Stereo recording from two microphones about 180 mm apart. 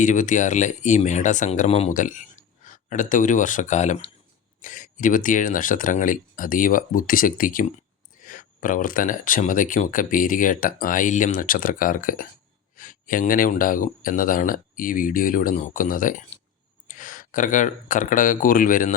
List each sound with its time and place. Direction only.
0.0 s speech: 45° left (ahead or behind)